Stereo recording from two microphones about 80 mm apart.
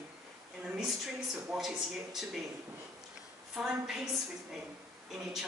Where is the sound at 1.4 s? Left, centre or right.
Centre.